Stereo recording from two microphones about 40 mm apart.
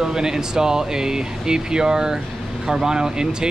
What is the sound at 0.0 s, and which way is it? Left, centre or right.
Speech, centre.